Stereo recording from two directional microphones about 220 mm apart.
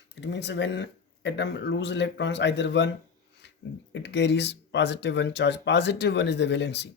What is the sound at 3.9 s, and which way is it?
Speech, 50° left (ahead or behind).